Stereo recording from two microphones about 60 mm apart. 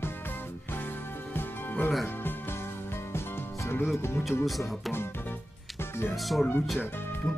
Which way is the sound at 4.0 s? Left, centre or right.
Left.